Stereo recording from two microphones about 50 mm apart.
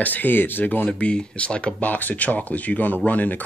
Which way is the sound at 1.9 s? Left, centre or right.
Left.